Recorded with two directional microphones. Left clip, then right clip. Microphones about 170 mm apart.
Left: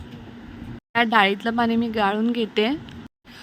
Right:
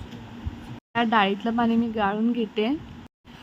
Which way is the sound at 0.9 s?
35° left (ahead or behind).